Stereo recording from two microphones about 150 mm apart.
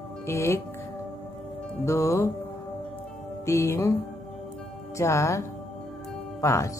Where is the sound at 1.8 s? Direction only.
20° left (ahead or behind).